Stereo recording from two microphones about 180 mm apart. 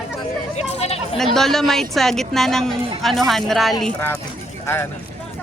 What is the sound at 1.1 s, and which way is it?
Speech, centre (ahead or behind).